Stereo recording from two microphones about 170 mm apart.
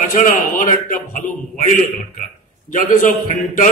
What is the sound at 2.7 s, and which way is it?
Speech, 55° left (ahead or behind).